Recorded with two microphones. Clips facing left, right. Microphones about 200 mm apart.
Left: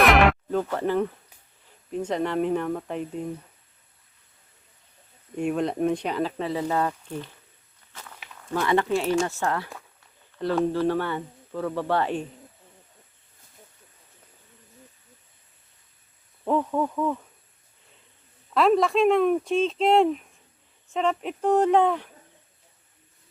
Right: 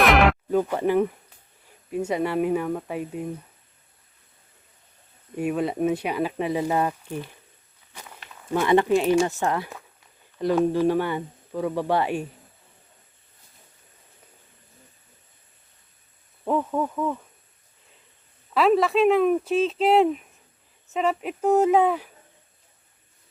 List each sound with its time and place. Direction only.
0.0 s music: centre (ahead or behind)
0.5 s speech: 15° right (ahead or behind)
5.4 s speech: 5° right (ahead or behind)
7.9 s walk: 15° right (ahead or behind)
8.4 s speech: 15° right (ahead or behind)
16.4 s speech: 5° right (ahead or behind)
18.5 s speech: centre (ahead or behind)